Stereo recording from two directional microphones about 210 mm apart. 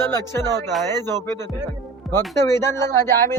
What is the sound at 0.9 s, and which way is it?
Speech, 20° right (ahead or behind).